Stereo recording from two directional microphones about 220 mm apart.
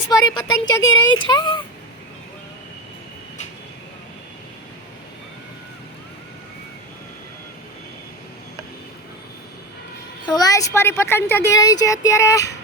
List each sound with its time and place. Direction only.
0.1 s speech: 15° left (ahead or behind)
10.2 s speech: 20° left (ahead or behind)